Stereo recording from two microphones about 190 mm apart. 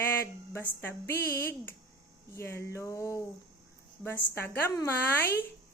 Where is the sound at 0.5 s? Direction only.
10° left (ahead or behind).